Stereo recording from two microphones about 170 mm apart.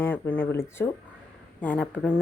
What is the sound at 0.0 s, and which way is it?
A woman's voice, 10° left (ahead or behind).